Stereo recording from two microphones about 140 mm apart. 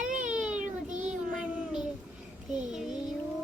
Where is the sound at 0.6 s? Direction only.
65° right (ahead or behind).